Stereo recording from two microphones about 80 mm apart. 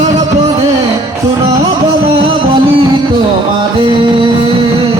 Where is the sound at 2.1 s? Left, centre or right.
Right.